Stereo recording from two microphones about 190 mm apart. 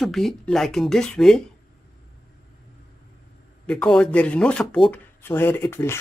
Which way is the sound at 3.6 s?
5° left (ahead or behind).